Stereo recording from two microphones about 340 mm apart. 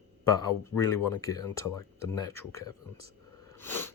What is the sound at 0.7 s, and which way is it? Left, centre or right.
Speech, left.